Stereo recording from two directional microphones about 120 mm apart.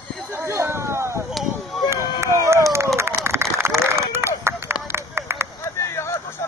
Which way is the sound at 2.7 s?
20° right (ahead or behind).